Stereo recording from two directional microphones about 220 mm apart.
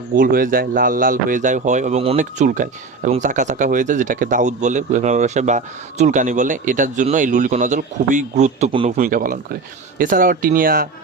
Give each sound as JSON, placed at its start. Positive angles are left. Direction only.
{"t": 0.2, "sound": "speech", "side_deg": -40}
{"t": 9.0, "sound": "speech", "side_deg": -40}